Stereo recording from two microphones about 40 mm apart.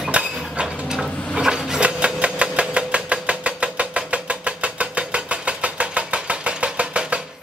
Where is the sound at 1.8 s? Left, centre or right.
Right.